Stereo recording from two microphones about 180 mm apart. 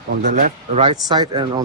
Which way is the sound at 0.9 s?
25° right (ahead or behind).